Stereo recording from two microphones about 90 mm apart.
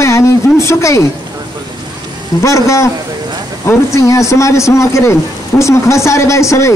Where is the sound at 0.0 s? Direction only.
30° left (ahead or behind).